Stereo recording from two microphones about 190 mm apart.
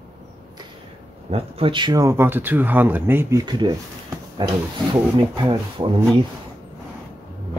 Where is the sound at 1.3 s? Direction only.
30° right (ahead or behind).